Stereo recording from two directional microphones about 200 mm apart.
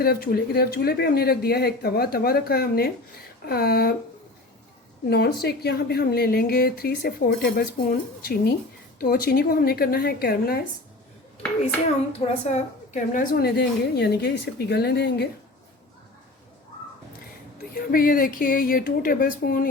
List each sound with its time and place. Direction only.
0.0 s speech: 50° left (ahead or behind)
5.0 s speech: 55° left (ahead or behind)
12.2 s speech: 35° left (ahead or behind); by 15.3 s 55° left (ahead or behind)
17.7 s speech: 45° left (ahead or behind)